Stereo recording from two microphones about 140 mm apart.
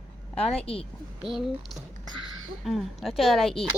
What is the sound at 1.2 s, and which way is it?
A woman's voice, centre (ahead or behind).